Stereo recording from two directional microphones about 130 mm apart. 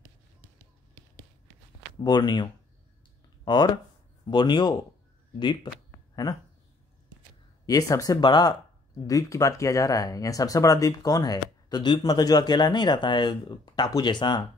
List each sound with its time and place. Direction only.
2.0 s speech: 35° left (ahead or behind)
7.6 s speech: 25° left (ahead or behind)